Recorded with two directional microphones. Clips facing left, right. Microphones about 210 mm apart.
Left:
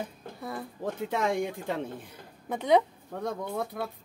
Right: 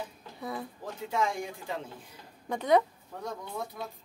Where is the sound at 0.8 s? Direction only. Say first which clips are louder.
Left 3 dB; 60° left (ahead or behind).